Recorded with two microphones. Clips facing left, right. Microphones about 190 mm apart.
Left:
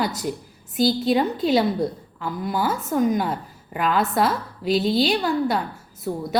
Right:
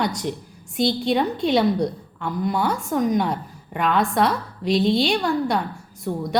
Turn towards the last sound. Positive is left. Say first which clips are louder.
# right 1 dB
turn(degrees=5)  # may be behind; listen again after turning